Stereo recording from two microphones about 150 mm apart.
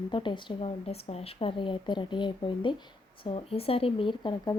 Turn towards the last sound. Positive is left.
turn(degrees=30)  # may be behind; listen again after turning